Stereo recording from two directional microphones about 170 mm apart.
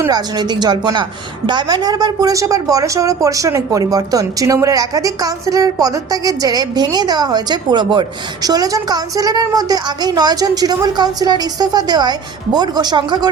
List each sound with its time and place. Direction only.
0.0 s a woman's voice: 25° right (ahead or behind)